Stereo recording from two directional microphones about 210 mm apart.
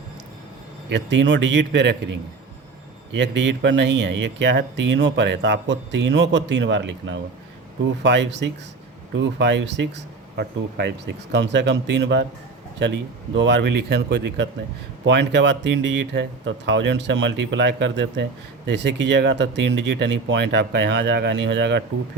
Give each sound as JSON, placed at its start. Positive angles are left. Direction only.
{"t": 0.9, "sound": "speech", "side_deg": -60}